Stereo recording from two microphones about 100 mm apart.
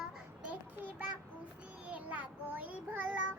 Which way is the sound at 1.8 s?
15° right (ahead or behind).